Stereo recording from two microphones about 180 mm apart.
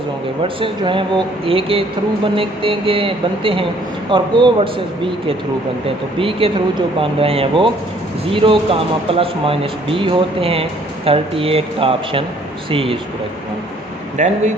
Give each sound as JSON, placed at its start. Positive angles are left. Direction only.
{"t": 0.4, "sound": "speech", "side_deg": -30}
{"t": 6.1, "sound": "speech", "side_deg": -30}
{"t": 14.2, "sound": "speech", "side_deg": -40}